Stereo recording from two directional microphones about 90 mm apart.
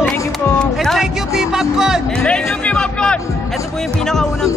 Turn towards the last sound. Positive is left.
turn(degrees=10)  # may be behind; listen again after turning